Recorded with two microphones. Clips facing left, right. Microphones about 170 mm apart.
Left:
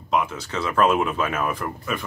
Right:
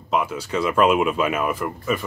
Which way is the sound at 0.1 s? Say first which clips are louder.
Right 1 dB; 10° right (ahead or behind).